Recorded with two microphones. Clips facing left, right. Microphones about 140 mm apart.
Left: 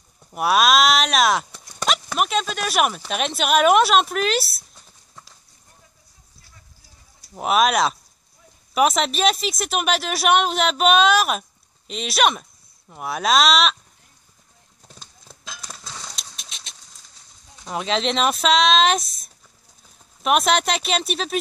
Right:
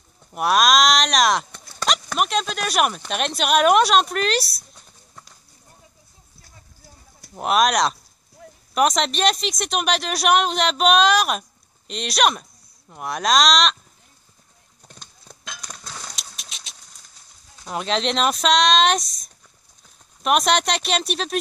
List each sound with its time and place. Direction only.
0.3 s speech: centre (ahead or behind)
7.3 s speech: centre (ahead or behind)
8.4 s a sound: 75° right (ahead or behind)
8.7 s speech: 5° left (ahead or behind)
14.8 s horse: centre (ahead or behind)
17.6 s speech: centre (ahead or behind)